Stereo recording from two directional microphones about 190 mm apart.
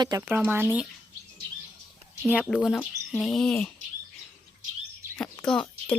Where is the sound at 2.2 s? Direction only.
5° right (ahead or behind).